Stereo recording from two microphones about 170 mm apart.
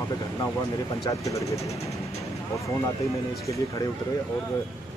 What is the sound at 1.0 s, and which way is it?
Speech, 20° left (ahead or behind).